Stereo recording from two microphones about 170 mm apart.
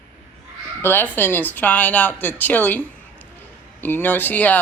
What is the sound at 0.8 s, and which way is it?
A woman's voice, 15° left (ahead or behind).